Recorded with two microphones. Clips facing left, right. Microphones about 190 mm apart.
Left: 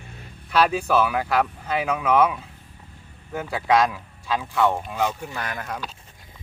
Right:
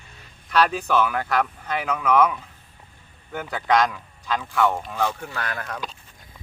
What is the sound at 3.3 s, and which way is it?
Speech, 5° left (ahead or behind).